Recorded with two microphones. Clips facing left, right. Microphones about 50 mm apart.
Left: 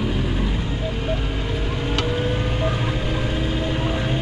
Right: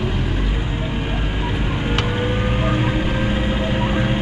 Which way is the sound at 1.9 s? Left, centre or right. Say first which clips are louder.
Right 1 dB; right.